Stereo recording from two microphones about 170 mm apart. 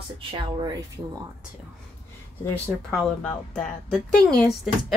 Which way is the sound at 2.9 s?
5° left (ahead or behind).